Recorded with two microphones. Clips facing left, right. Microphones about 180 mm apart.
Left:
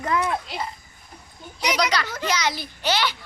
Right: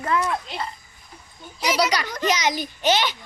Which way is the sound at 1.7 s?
10° right (ahead or behind).